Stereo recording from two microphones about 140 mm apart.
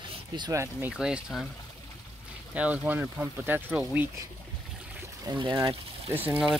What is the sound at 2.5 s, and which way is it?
Speech, 10° right (ahead or behind).